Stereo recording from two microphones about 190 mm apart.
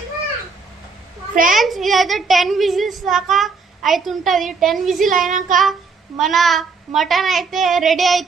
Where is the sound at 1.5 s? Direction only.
Centre (ahead or behind).